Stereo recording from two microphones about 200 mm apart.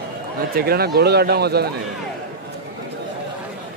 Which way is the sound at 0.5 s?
50° right (ahead or behind).